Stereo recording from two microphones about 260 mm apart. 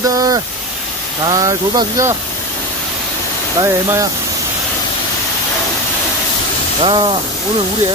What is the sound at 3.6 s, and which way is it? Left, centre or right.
Speech, centre.